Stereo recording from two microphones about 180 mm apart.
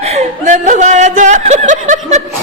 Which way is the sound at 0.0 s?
40° right (ahead or behind).